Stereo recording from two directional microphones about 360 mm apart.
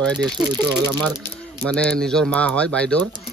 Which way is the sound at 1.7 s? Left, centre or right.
Centre.